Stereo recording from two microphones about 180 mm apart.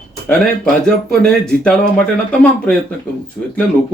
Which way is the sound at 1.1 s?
5° left (ahead or behind).